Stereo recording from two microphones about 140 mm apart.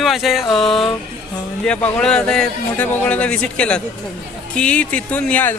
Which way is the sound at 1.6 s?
10° left (ahead or behind).